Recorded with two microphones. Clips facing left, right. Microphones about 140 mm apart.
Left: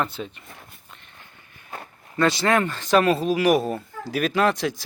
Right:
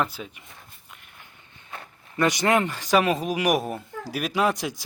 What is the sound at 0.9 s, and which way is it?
Walk, 10° right (ahead or behind).